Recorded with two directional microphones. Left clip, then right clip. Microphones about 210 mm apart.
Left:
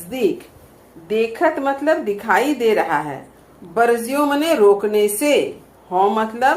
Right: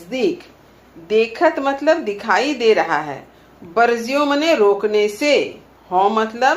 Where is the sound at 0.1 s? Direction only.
35° left (ahead or behind).